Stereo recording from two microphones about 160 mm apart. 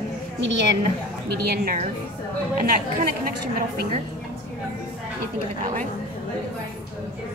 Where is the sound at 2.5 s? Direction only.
70° right (ahead or behind).